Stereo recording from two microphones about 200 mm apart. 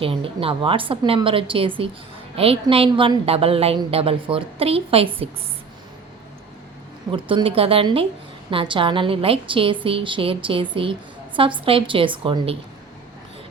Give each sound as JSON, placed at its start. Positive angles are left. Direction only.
{"t": 0.0, "sound": "a woman's voice", "side_deg": -25}
{"t": 7.1, "sound": "a woman's voice", "side_deg": -25}